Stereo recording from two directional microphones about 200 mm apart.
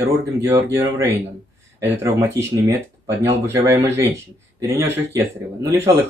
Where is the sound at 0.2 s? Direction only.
15° right (ahead or behind).